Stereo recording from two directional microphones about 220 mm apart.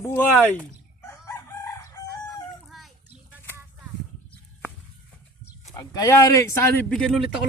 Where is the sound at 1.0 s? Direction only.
10° left (ahead or behind).